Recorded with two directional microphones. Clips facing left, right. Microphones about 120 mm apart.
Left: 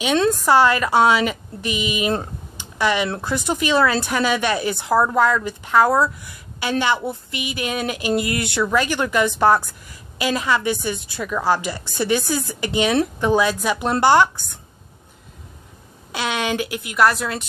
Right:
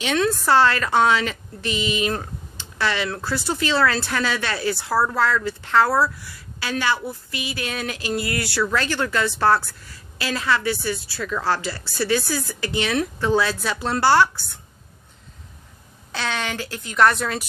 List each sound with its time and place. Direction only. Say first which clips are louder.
0.3 s a woman's voice: left 1 dB; 15° left (ahead or behind)
2.5 s a sound: left 4 dB; 15° left (ahead or behind)
3.2 s a woman's voice: left 2 dB; 20° left (ahead or behind)
16.1 s a woman's voice: left 4 dB; 15° left (ahead or behind)